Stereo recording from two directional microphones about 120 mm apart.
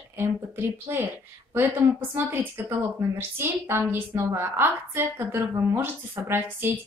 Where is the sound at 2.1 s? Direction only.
20° right (ahead or behind).